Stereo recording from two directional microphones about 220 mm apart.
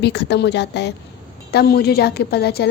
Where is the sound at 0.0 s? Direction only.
50° left (ahead or behind).